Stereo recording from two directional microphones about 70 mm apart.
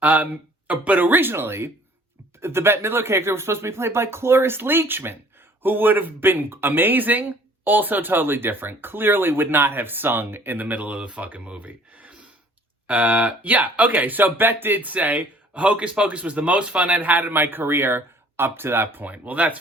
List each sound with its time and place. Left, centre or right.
0.0 s speech: right